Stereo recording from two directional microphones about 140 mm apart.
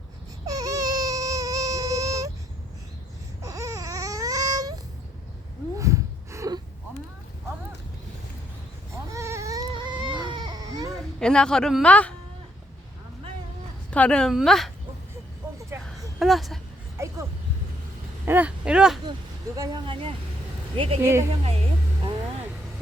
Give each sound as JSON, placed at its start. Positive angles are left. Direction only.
{"t": 0.4, "sound": "baby cry", "side_deg": -25}
{"t": 3.4, "sound": "baby cry", "side_deg": -20}
{"t": 5.7, "sound": "gasp", "side_deg": -20}
{"t": 9.0, "sound": "baby cry", "side_deg": -20}
{"t": 11.2, "sound": "speech", "side_deg": 5}
{"t": 13.9, "sound": "speech", "side_deg": 10}
{"t": 15.7, "sound": "a sound", "side_deg": -20}
{"t": 16.1, "sound": "speech", "side_deg": 0}
{"t": 17.0, "sound": "a sound", "side_deg": -20}
{"t": 18.3, "sound": "speech", "side_deg": -10}
{"t": 19.5, "sound": "speech", "side_deg": -25}
{"t": 19.8, "sound": "speech", "side_deg": -40}
{"t": 21.0, "sound": "speech", "side_deg": -20}
{"t": 21.4, "sound": "speech", "side_deg": -45}